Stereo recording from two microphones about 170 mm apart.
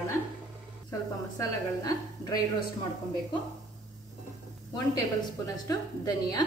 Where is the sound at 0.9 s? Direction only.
20° left (ahead or behind).